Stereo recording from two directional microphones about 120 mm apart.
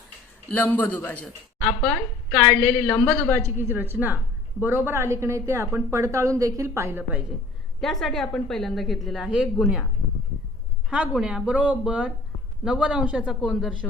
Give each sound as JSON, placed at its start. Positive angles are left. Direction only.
{"t": 0.5, "sound": "a woman's voice", "side_deg": 15}
{"t": 3.4, "sound": "a woman's voice", "side_deg": -20}
{"t": 7.8, "sound": "a woman's voice", "side_deg": 0}
{"t": 10.8, "sound": "a woman's voice", "side_deg": -5}